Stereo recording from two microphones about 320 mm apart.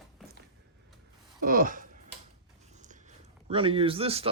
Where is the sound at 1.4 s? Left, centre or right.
Right.